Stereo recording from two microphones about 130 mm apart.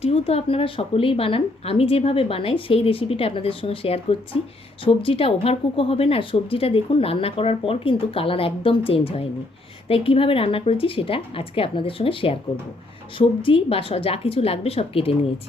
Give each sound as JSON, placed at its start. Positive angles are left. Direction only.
{"t": 0.0, "sound": "a woman's voice", "side_deg": 50}